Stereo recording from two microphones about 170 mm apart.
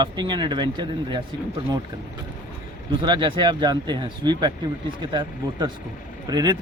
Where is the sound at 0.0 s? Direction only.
25° right (ahead or behind).